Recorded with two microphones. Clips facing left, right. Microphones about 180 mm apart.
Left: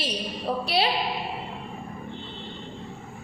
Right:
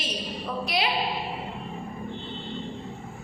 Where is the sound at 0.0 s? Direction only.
30° left (ahead or behind).